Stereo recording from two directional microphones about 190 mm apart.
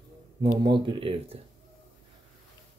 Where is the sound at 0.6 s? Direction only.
25° right (ahead or behind).